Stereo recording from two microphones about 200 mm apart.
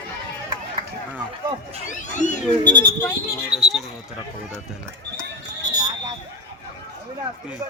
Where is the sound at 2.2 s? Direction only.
40° left (ahead or behind).